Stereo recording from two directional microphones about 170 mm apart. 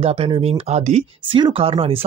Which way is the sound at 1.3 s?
30° right (ahead or behind).